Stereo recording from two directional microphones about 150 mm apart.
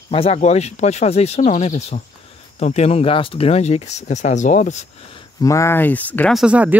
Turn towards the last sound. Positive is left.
turn(degrees=-10)  # may be behind; listen again after turning